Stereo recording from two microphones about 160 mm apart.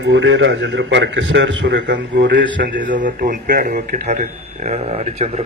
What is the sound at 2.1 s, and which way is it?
Speech, 75° right (ahead or behind).